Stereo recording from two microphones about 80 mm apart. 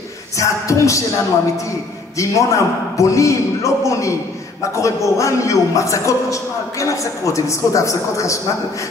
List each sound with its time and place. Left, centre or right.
0.4 s a man's voice: left
2.1 s a man's voice: left